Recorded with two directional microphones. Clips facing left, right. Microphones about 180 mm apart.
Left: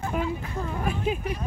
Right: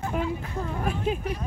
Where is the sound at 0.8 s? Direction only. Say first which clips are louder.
Even; 5° left (ahead or behind).